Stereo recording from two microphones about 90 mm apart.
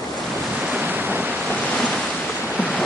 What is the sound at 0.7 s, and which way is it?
Waves, 20° right (ahead or behind).